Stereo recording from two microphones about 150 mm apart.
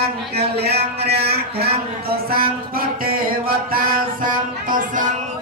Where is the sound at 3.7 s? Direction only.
70° right (ahead or behind).